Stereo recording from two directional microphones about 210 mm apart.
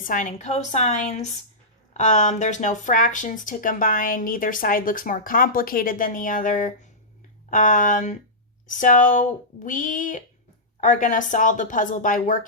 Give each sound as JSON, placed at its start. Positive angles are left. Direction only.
{"t": 0.0, "sound": "speech", "side_deg": 40}